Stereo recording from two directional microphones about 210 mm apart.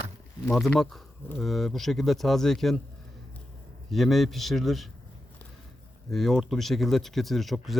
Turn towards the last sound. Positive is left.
turn(degrees=0)  # may be behind; listen again after turning